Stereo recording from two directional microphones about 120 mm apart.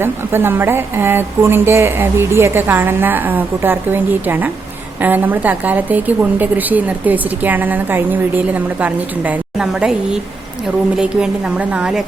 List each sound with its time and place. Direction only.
0.0 s a woman's voice: 20° right (ahead or behind)